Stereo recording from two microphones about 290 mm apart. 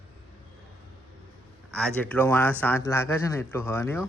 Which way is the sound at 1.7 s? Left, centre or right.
Centre.